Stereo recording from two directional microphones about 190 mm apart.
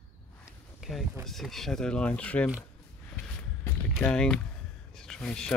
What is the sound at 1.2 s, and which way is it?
Speech, centre (ahead or behind).